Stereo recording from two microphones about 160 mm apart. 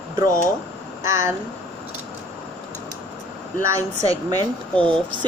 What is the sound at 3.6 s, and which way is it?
Speech, 20° right (ahead or behind).